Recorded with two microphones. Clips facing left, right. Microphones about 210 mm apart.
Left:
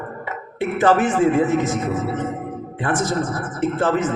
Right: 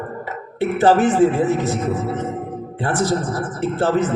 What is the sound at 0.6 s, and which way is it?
A man's voice, 35° right (ahead or behind).